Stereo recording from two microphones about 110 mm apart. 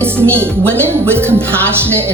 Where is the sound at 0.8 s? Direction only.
20° right (ahead or behind).